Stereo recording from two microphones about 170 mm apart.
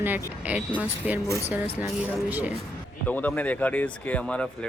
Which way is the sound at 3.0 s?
10° left (ahead or behind).